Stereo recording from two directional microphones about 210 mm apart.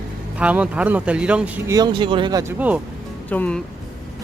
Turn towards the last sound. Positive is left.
turn(degrees=5)  # may be behind; listen again after turning